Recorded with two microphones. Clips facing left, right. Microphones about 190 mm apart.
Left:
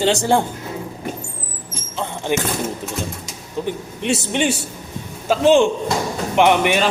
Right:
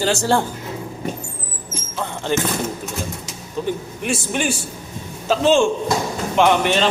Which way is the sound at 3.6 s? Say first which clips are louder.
Even; 15° left (ahead or behind).